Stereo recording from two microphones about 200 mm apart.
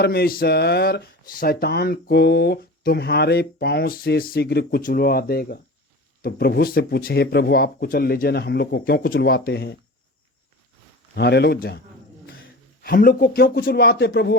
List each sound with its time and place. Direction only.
0.0 s speech: 55° left (ahead or behind)
11.1 s speech: 55° left (ahead or behind)
12.8 s speech: 50° left (ahead or behind)